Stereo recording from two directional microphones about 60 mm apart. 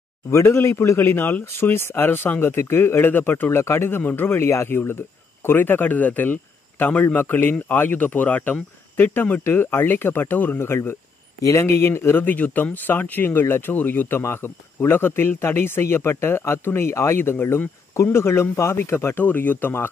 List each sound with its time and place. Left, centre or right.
0.3 s a man's voice: left
9.4 s speech: left
14.2 s speech: left
19.2 s speech: left